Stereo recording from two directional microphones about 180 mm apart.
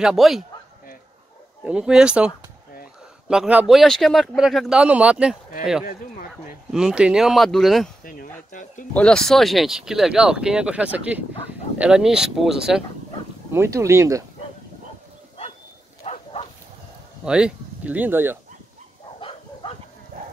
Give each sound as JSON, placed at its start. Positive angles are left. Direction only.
{"t": 0.0, "sound": "speech", "side_deg": 0}
{"t": 1.6, "sound": "speech", "side_deg": -5}
{"t": 6.7, "sound": "speech", "side_deg": -5}
{"t": 8.0, "sound": "speech", "side_deg": 50}
{"t": 8.9, "sound": "speech", "side_deg": 5}
{"t": 13.5, "sound": "speech", "side_deg": -15}
{"t": 16.0, "sound": "bow-wow", "side_deg": 35}
{"t": 17.2, "sound": "speech", "side_deg": -5}
{"t": 19.1, "sound": "bow-wow", "side_deg": 30}